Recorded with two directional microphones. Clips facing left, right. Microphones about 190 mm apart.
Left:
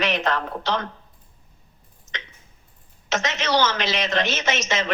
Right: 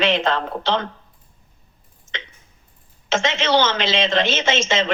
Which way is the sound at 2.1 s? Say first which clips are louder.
Right 3 dB; 25° right (ahead or behind).